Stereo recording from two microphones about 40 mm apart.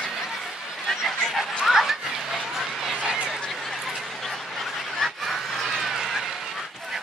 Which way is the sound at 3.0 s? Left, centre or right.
Right.